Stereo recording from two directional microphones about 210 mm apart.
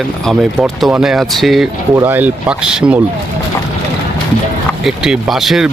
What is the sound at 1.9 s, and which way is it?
Speech, 10° right (ahead or behind).